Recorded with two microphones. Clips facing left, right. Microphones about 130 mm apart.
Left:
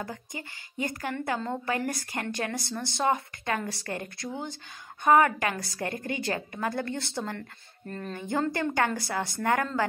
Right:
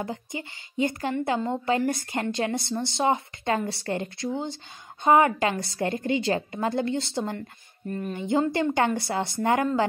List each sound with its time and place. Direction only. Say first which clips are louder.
0.0 s a woman's voice: right 5 dB; 20° right (ahead or behind)